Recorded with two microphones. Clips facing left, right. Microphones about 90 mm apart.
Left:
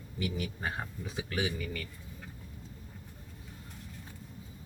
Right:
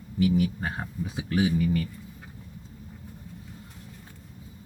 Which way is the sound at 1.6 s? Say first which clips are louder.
Right 13 dB; 20° right (ahead or behind).